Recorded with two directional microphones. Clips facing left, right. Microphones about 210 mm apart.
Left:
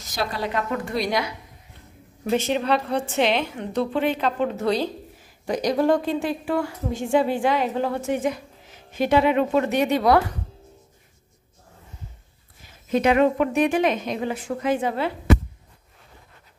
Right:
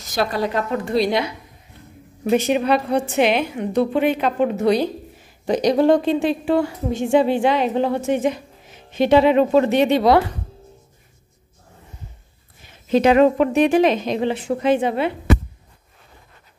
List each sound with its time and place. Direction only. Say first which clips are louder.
0.2 s speech: right 6 dB; 60° right (ahead or behind)
0.6 s speech: right 5 dB; 30° right (ahead or behind)
2.3 s a woman's voice: right 4 dB; 10° right (ahead or behind)
13.0 s speech: right 4 dB; 35° right (ahead or behind)